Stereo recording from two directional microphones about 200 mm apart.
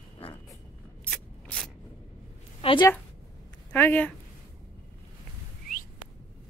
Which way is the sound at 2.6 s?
25° left (ahead or behind).